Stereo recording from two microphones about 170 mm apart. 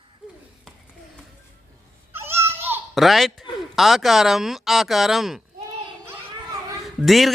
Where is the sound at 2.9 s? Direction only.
Centre (ahead or behind).